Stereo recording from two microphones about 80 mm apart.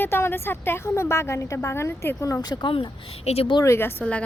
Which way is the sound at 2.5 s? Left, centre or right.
Left.